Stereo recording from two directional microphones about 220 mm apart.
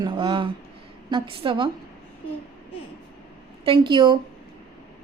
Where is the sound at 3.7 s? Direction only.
20° right (ahead or behind).